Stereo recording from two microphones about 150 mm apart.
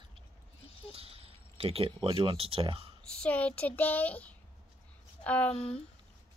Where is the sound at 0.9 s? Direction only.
40° right (ahead or behind).